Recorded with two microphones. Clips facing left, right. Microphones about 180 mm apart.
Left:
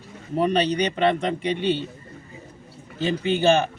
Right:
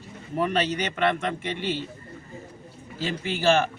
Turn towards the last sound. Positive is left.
turn(degrees=20)  # may be behind; listen again after turning